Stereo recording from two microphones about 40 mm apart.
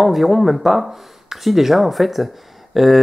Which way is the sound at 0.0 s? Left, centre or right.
Centre.